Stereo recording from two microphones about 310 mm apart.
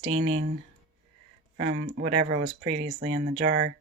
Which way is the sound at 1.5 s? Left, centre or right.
Right.